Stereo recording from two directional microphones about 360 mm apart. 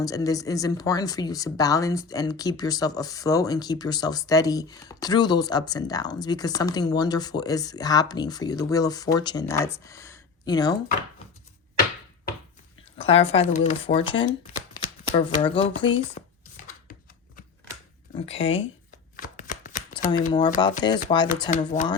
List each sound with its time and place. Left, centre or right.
0.0 s speech: centre
13.0 s speech: centre
16.2 s chopping: left
18.3 s speech: centre